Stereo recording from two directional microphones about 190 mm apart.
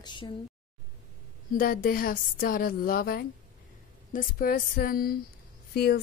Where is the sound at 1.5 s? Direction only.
50° left (ahead or behind).